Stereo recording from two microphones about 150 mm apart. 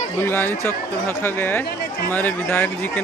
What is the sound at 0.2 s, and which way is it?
Speech, 15° left (ahead or behind).